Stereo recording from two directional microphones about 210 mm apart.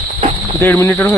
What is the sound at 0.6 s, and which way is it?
Speech, 10° left (ahead or behind).